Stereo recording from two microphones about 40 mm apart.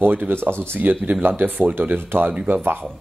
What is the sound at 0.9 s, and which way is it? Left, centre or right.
Speech, right.